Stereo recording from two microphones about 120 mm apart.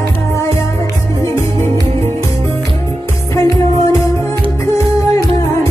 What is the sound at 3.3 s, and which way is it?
Music, 25° left (ahead or behind).